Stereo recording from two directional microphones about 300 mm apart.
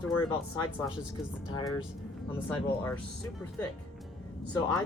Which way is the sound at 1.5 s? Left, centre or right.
Centre.